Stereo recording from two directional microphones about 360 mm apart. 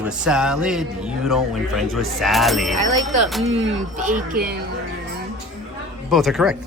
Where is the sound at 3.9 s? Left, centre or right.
Right.